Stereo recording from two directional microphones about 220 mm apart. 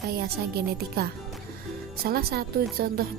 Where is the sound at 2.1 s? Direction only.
45° right (ahead or behind).